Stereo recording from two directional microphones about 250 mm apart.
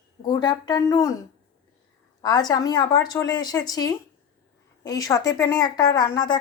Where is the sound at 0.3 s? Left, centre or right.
Centre.